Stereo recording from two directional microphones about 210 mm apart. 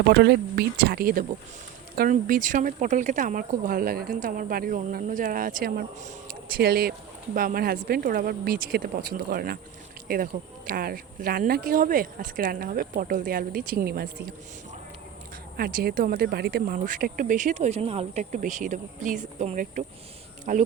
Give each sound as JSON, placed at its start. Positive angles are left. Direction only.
{"t": 0.1, "sound": "speech", "side_deg": -50}
{"t": 15.5, "sound": "speech", "side_deg": -45}